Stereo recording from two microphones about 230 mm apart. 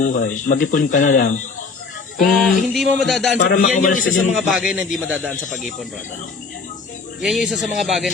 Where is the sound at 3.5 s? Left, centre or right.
Left.